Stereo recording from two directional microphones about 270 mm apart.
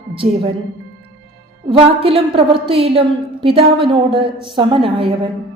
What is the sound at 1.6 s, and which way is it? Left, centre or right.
Speech, right.